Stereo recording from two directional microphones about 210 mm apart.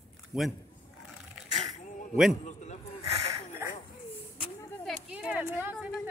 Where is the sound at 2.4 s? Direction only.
35° left (ahead or behind).